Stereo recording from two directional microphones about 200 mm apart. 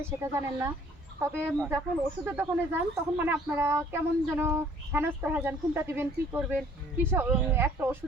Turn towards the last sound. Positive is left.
turn(degrees=-10)  # may be behind; listen again after turning